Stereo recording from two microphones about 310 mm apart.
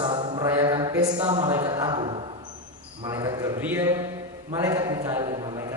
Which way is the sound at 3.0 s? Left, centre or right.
Centre.